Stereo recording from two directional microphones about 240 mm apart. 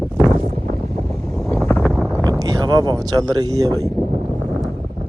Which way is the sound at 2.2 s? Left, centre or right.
Centre.